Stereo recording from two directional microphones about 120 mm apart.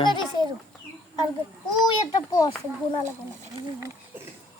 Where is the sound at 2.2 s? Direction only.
30° left (ahead or behind).